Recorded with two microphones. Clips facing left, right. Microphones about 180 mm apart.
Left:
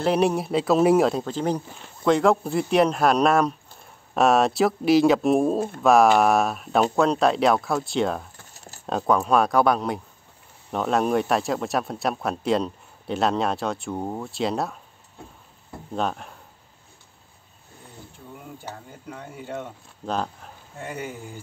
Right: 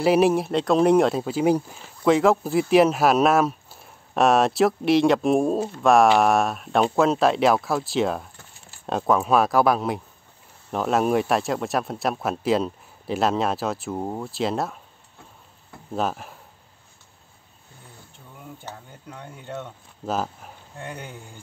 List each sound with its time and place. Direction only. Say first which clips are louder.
0.0 s speech: right 3 dB; 5° right (ahead or behind)
8.5 s keys jangling: left 5 dB; 40° left (ahead or behind)
8.8 s speech: even; centre (ahead or behind)
15.9 s speech: right 1 dB; 5° right (ahead or behind)
18.6 s speech: left 1 dB; 5° left (ahead or behind)
20.1 s speech: right 1 dB; 5° right (ahead or behind)
20.8 s speech: left 3 dB; 5° left (ahead or behind)